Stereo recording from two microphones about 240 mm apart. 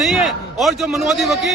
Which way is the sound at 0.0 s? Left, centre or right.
Centre.